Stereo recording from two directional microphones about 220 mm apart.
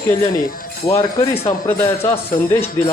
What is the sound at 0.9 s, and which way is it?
Speech, 25° left (ahead or behind).